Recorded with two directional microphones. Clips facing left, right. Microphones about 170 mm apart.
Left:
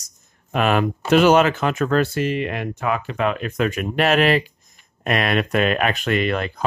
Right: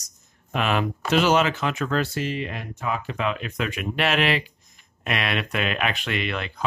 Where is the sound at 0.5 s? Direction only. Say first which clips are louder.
Left 5 dB; 50° left (ahead or behind).